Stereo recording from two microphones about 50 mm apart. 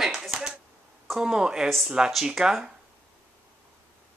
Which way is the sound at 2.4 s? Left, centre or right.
Centre.